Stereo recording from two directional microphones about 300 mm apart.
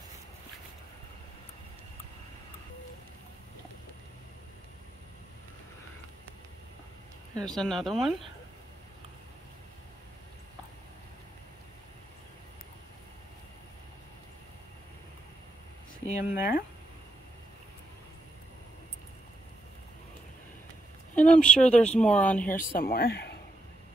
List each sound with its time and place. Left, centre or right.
7.3 s speech: centre
16.1 s speech: left
21.1 s speech: centre
22.6 s speech: left